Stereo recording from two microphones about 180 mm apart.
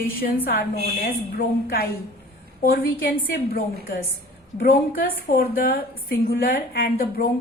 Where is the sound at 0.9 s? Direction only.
60° left (ahead or behind).